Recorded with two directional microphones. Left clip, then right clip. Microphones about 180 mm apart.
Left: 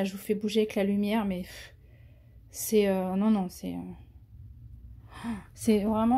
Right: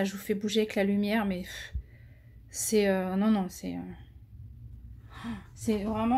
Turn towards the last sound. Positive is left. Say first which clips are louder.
# left 4 dB
turn(degrees=45)  # may be behind; listen again after turning